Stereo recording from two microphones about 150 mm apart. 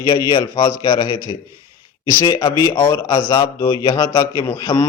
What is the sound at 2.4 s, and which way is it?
Speech, 30° left (ahead or behind).